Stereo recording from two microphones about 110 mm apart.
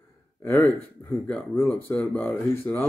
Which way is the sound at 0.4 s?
15° left (ahead or behind).